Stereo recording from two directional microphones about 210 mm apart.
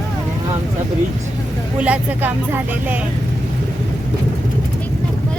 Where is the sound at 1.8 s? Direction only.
5° right (ahead or behind).